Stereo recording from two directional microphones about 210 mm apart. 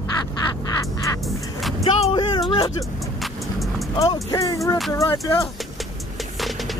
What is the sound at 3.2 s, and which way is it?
Vehicle, centre (ahead or behind).